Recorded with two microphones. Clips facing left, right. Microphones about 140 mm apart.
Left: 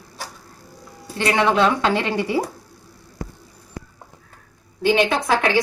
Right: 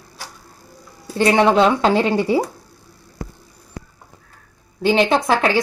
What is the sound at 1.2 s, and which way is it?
A woman's voice, 30° right (ahead or behind).